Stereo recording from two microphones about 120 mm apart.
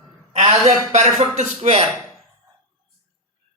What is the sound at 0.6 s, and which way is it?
Speech, 65° right (ahead or behind).